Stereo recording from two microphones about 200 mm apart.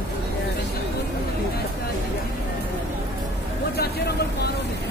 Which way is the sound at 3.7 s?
55° left (ahead or behind).